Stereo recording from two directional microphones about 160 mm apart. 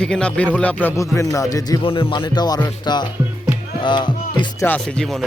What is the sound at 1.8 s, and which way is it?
Speech, 35° left (ahead or behind).